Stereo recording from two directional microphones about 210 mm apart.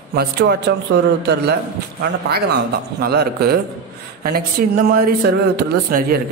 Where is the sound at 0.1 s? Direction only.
50° right (ahead or behind).